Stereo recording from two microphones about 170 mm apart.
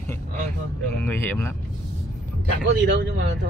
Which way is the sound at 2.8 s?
90° right.